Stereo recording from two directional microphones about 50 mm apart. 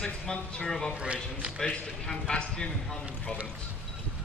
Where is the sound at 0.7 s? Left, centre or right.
Centre.